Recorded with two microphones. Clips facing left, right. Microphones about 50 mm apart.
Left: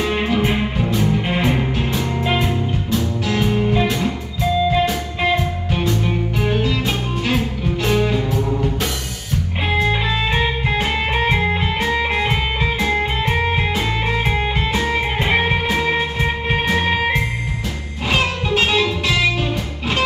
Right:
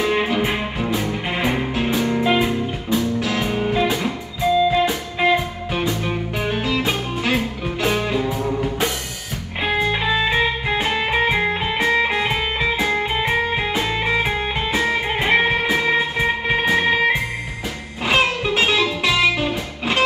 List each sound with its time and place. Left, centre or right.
0.2 s music: centre
4.8 s music: centre
18.0 s music: centre